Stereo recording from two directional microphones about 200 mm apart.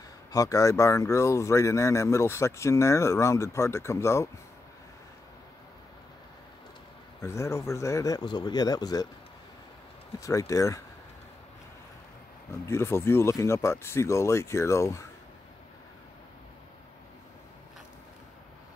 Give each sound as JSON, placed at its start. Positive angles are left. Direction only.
{"t": 0.3, "sound": "speech", "side_deg": 15}
{"t": 7.2, "sound": "speech", "side_deg": 15}
{"t": 10.2, "sound": "speech", "side_deg": 15}
{"t": 12.6, "sound": "speech", "side_deg": 15}